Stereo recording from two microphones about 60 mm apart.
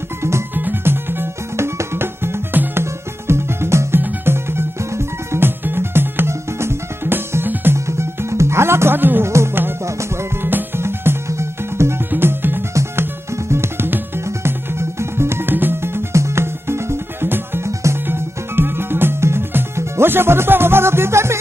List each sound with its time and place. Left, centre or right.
0.6 s music: right
9.2 s music: right
12.1 s music: right